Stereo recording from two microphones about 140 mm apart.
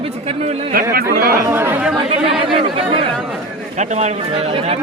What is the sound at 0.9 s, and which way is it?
Speech, 90° right.